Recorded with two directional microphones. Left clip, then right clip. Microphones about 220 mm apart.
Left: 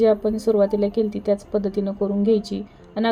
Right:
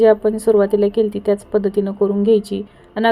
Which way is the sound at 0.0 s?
10° right (ahead or behind).